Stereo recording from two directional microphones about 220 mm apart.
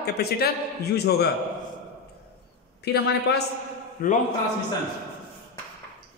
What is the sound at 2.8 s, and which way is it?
A woman's voice, 50° left (ahead or behind).